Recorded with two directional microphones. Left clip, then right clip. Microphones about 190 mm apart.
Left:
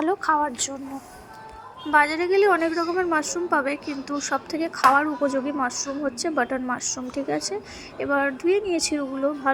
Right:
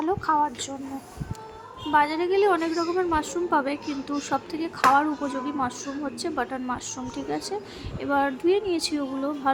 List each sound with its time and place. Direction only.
0.0 s a woman's voice: 15° left (ahead or behind)
1.9 s a woman's voice: 20° left (ahead or behind)